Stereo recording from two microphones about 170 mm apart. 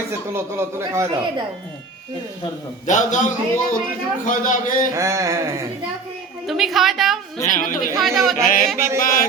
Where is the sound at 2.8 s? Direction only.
45° left (ahead or behind).